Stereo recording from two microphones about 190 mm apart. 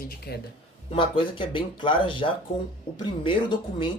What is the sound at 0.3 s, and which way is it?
Speech, 55° left (ahead or behind).